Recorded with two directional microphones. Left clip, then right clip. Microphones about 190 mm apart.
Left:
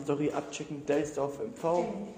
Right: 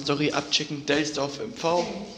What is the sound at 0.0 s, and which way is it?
A man's voice, centre (ahead or behind).